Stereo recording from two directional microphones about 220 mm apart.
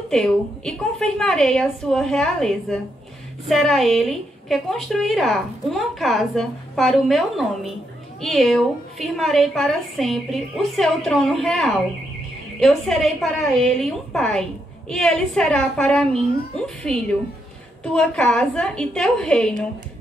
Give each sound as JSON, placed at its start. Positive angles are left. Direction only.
{"t": 0.1, "sound": "a woman's voice", "side_deg": 0}